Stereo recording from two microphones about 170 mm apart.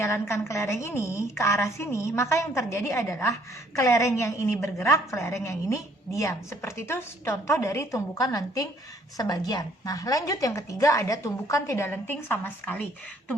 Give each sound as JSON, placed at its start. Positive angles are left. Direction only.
{"t": 0.0, "sound": "a woman's voice", "side_deg": 15}